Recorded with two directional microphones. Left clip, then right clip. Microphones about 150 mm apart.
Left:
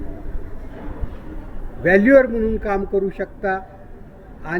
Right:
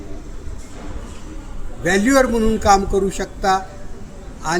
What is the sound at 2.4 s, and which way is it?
A man's voice, 35° right (ahead or behind).